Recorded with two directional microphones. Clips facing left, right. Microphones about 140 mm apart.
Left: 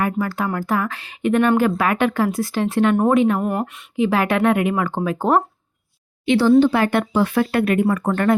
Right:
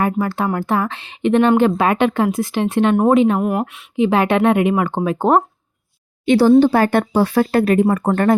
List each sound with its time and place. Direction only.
0.0 s a woman's voice: 25° right (ahead or behind)
3.4 s speech: 5° right (ahead or behind)
3.9 s a woman's voice: 25° right (ahead or behind)
6.2 s speech: 45° right (ahead or behind)